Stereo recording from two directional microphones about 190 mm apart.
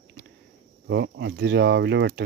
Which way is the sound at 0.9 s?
70° right (ahead or behind).